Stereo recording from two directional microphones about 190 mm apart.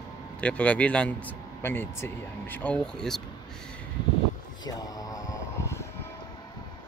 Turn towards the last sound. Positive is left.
turn(degrees=15)  # may be behind; listen again after turning